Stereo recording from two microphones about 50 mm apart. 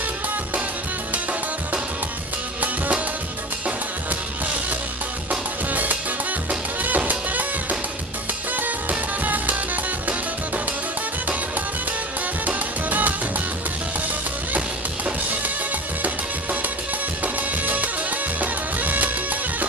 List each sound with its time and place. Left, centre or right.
5.3 s music: right
8.5 s music: right
12.4 s music: right
17.2 s music: right